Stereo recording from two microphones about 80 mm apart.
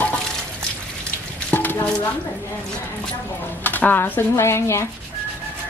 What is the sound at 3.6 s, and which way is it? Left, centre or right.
Speech, left.